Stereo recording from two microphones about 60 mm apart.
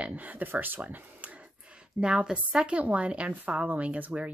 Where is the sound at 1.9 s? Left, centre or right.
Centre.